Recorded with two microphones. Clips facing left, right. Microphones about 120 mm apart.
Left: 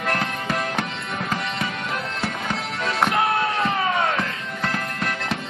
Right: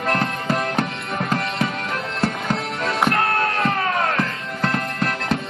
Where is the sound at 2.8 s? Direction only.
Centre (ahead or behind).